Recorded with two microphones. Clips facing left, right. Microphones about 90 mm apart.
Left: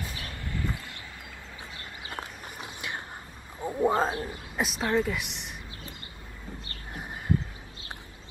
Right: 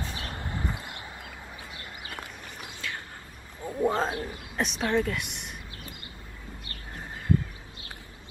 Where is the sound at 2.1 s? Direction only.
20° left (ahead or behind).